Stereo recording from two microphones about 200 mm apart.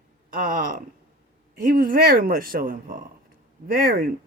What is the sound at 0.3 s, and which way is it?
Speech, 45° right (ahead or behind).